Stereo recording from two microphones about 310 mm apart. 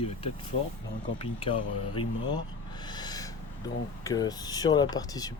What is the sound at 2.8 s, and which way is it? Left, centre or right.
Owl, centre.